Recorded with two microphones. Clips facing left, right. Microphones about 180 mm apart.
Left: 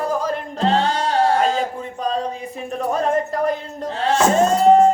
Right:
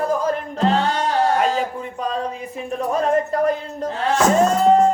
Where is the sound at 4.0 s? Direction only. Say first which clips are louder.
Even; 30° left (ahead or behind).